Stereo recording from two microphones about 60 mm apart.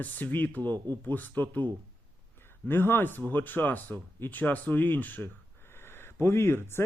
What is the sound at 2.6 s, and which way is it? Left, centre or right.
Speech, left.